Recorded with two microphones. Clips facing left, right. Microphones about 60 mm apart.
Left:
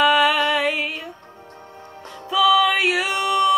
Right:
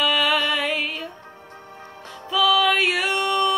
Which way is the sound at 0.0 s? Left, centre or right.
Centre.